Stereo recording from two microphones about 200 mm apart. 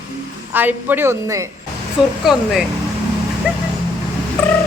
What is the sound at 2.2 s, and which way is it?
Speech, centre (ahead or behind).